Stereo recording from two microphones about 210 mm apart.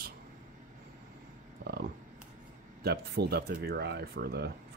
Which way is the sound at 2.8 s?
50° right (ahead or behind).